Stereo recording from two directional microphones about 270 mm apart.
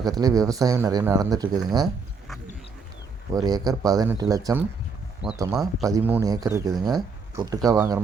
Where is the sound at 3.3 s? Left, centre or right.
Centre.